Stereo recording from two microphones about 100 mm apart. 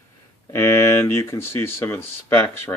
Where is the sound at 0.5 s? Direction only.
25° left (ahead or behind).